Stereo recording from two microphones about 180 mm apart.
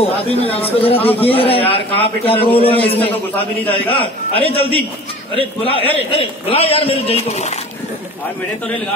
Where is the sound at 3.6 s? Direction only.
10° left (ahead or behind).